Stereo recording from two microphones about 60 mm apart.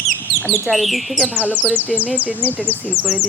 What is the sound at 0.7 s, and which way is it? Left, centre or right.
Speech, centre.